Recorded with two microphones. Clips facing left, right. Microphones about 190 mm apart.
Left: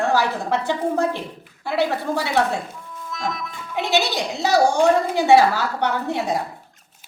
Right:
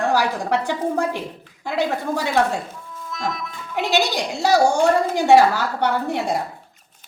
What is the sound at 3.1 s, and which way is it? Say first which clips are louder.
Music: right 1 dB; centre (ahead or behind).